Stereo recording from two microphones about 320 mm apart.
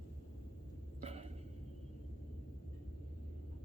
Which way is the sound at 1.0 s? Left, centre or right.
Centre.